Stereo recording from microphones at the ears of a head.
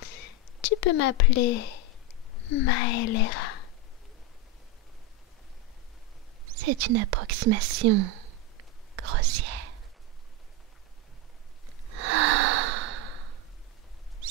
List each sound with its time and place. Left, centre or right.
0.0 s a sound: left
2.4 s speech: left
6.4 s whispering: right
11.9 s snort: right